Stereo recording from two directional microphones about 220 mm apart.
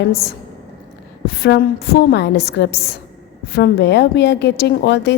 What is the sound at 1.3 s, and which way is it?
A woman's voice, 50° left (ahead or behind).